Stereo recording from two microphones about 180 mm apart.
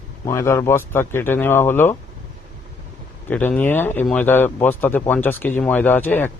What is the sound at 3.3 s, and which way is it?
A man's voice, 10° left (ahead or behind).